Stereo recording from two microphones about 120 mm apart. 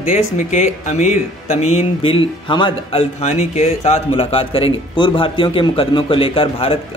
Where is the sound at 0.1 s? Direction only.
90° left; by 4.0 s 70° left (ahead or behind).